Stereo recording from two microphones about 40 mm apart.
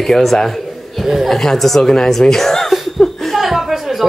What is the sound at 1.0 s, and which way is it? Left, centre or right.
Chuckle, centre.